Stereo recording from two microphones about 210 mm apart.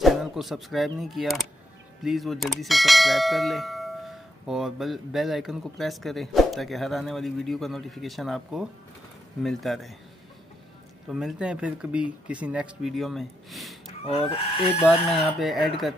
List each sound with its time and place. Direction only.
0.0 s speech: centre (ahead or behind)
2.0 s bell: centre (ahead or behind)
11.1 s bell: centre (ahead or behind)
14.3 s speech: 30° left (ahead or behind)
15.0 s bell: centre (ahead or behind)